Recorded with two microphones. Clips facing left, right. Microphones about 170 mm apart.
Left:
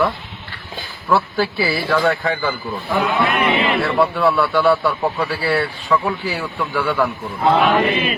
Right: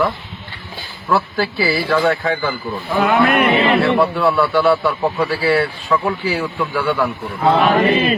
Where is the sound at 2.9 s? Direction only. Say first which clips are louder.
Right 4 dB; 65° right (ahead or behind).